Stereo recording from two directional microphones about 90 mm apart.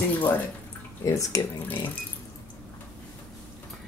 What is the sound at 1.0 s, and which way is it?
Speech, 35° left (ahead or behind).